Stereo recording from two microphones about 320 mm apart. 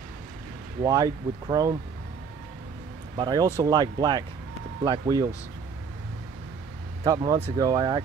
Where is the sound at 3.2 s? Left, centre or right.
Centre.